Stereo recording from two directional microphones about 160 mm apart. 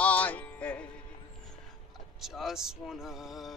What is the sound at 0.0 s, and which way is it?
Music, 10° left (ahead or behind).